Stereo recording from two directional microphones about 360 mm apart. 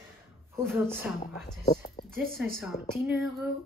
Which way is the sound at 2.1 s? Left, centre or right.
Right.